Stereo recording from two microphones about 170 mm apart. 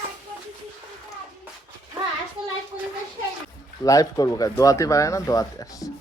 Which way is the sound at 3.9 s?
20° left (ahead or behind).